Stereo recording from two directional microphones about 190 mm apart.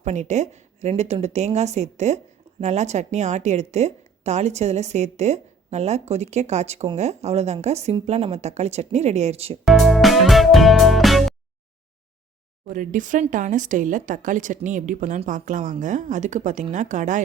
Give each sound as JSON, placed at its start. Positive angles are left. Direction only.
{"t": 0.0, "sound": "a woman's voice", "side_deg": -35}
{"t": 9.6, "sound": "music", "side_deg": 0}
{"t": 12.6, "sound": "a woman's voice", "side_deg": -45}